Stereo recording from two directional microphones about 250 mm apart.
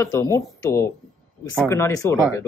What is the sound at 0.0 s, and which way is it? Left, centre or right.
Speech, centre.